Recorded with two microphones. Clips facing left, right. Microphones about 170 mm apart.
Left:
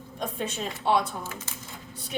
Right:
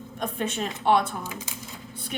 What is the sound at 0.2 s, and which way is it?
Speech, 60° right (ahead or behind).